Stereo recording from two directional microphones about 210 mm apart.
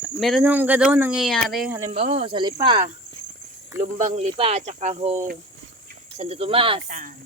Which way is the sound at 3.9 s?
35° right (ahead or behind).